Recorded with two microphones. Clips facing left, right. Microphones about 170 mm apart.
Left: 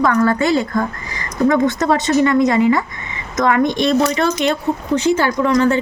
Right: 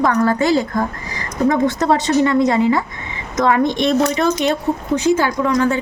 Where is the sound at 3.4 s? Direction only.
5° right (ahead or behind).